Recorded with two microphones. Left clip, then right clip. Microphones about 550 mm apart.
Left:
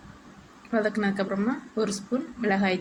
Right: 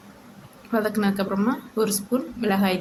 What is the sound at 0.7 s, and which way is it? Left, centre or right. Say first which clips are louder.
A woman's voice: right 2 dB; right.